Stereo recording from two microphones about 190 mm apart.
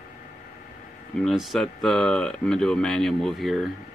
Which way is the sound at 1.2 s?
Centre (ahead or behind).